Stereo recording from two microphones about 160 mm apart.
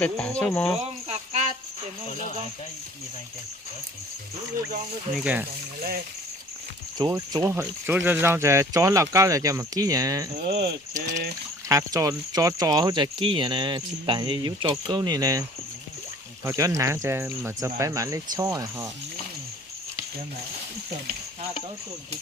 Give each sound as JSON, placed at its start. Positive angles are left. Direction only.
{"t": 0.0, "sound": "speech", "side_deg": 10}
{"t": 1.0, "sound": "a sound", "side_deg": -40}
{"t": 5.1, "sound": "speech", "side_deg": -10}
{"t": 7.0, "sound": "speech", "side_deg": -25}
{"t": 10.6, "sound": "speech", "side_deg": -80}
{"t": 11.7, "sound": "speech", "side_deg": -20}